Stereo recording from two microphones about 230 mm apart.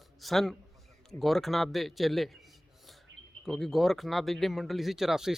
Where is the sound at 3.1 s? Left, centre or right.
Right.